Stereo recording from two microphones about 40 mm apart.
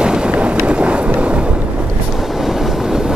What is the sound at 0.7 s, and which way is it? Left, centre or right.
Vehicle, right.